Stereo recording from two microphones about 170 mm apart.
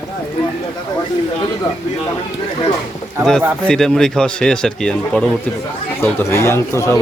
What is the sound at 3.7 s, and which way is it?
Speech, 5° left (ahead or behind).